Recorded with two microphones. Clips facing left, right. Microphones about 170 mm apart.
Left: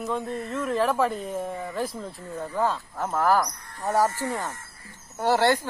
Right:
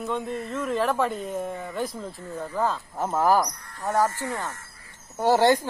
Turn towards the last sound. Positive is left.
turn(degrees=-15)  # may be behind; listen again after turning